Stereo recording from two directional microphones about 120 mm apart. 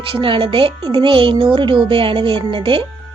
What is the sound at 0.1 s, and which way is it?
Speech, 45° right (ahead or behind).